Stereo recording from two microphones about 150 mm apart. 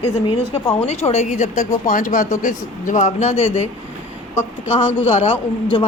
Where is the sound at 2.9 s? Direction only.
55° left (ahead or behind).